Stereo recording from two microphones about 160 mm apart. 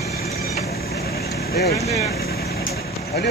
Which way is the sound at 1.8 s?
40° left (ahead or behind).